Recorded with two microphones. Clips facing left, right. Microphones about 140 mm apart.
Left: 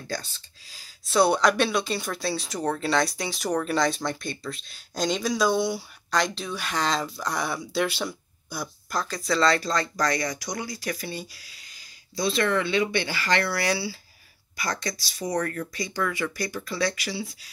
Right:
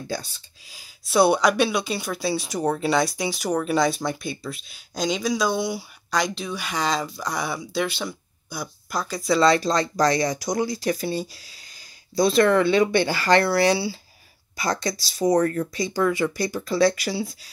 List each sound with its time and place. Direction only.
0.1 s speech: 10° right (ahead or behind); by 15.4 s 40° right (ahead or behind)
15.4 s speech: 25° right (ahead or behind); by 17.3 s 45° right (ahead or behind)